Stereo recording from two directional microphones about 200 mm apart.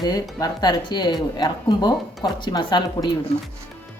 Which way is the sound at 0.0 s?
20° left (ahead or behind).